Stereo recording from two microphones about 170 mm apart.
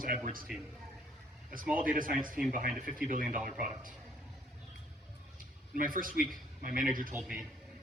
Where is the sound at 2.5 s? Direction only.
50° right (ahead or behind).